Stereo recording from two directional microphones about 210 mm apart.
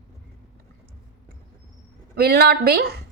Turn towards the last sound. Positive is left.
turn(degrees=-50)  # may be behind; listen again after turning